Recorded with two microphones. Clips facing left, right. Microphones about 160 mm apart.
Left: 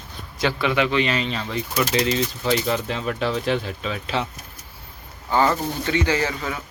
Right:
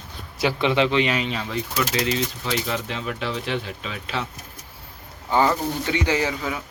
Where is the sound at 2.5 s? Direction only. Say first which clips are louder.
Left 7 dB; 35° left (ahead or behind).